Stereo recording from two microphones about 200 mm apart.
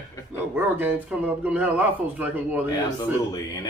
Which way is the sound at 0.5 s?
10° right (ahead or behind).